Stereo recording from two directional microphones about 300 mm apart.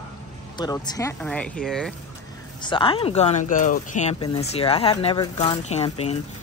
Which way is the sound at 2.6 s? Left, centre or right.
Centre.